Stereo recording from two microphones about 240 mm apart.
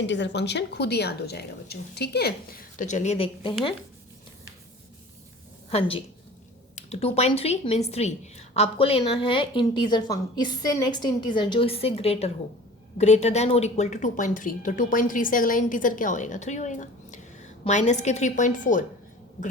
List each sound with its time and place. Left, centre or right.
0.0 s a woman's voice: left
6.7 s a woman's voice: left